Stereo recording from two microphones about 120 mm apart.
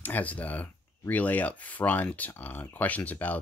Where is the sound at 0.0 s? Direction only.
15° left (ahead or behind).